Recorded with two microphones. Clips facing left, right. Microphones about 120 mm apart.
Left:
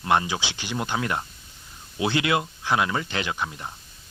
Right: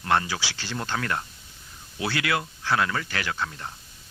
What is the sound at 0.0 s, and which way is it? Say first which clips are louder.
Speech: left 2 dB; 15° left (ahead or behind).